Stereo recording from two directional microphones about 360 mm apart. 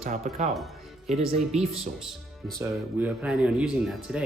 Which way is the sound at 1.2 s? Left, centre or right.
Centre.